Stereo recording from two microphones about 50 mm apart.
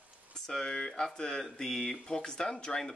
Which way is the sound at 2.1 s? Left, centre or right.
Centre.